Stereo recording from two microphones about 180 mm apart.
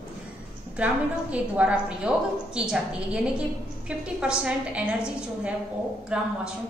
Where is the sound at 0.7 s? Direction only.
5° right (ahead or behind).